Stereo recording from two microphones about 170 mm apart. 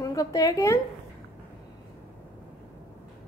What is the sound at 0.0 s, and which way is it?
Speech, 20° left (ahead or behind).